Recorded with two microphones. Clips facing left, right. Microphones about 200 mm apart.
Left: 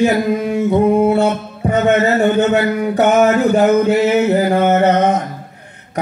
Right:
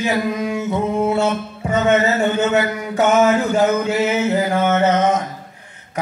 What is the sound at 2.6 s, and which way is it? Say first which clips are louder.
Music: left 4 dB; 60° left (ahead or behind).